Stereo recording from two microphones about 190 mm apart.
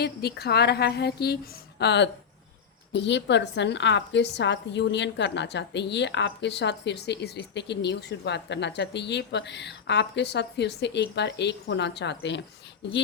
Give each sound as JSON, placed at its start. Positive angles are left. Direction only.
{"t": 0.0, "sound": "a woman's voice", "side_deg": 55}